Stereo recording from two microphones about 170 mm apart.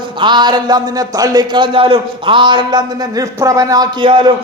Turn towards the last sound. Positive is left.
turn(degrees=-30)  # may be behind; listen again after turning